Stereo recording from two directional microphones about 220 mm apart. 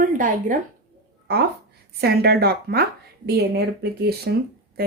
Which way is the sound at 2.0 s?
45° right (ahead or behind).